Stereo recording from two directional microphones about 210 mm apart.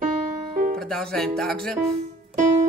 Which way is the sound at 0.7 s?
Centre (ahead or behind).